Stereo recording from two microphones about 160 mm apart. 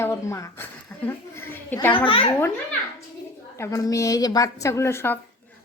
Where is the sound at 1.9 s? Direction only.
35° left (ahead or behind).